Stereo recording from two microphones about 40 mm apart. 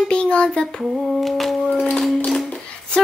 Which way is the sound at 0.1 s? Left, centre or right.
Left.